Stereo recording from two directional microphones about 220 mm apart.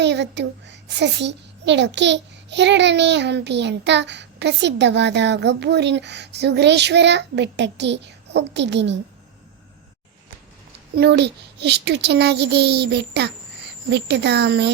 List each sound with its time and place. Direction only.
0.0 s a child's voice: 50° right (ahead or behind)
10.9 s a child's voice: 50° right (ahead or behind)